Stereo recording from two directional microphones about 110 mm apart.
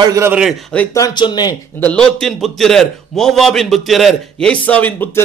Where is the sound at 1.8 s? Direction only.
10° left (ahead or behind).